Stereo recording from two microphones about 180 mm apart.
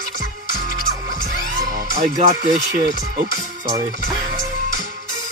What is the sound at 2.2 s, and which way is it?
Speech, 40° right (ahead or behind).